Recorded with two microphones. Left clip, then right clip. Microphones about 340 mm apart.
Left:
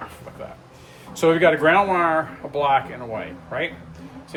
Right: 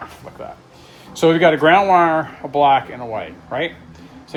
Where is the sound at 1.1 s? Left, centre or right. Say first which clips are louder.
Right 3 dB; right.